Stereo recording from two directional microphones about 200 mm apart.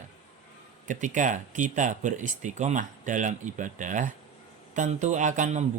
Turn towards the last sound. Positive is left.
turn(degrees=-40)  # may be behind; listen again after turning